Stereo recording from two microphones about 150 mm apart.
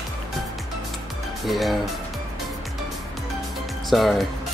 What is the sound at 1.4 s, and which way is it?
Speech, centre (ahead or behind).